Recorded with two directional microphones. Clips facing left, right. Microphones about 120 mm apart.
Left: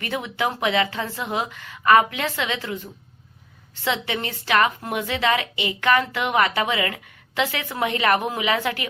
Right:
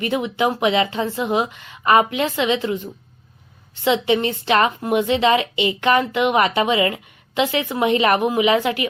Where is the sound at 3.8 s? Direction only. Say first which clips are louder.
Right 8 dB; 20° right (ahead or behind).